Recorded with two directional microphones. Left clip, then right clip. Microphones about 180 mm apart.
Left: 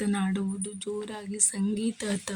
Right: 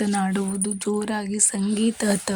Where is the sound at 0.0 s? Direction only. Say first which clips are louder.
Right 6 dB; 25° right (ahead or behind).